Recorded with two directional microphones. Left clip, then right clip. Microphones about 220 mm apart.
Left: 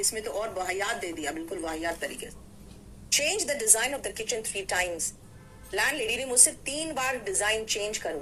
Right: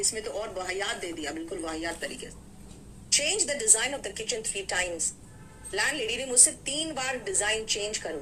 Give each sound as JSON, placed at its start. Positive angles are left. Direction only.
{"t": 0.0, "sound": "a woman's voice", "side_deg": 5}